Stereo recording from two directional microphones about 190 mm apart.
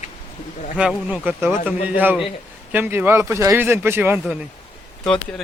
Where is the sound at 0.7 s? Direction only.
5° right (ahead or behind).